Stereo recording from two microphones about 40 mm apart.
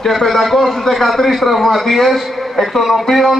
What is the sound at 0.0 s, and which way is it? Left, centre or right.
A man's voice, centre.